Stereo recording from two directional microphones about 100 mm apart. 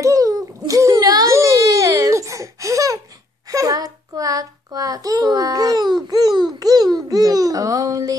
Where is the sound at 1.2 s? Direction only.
30° right (ahead or behind).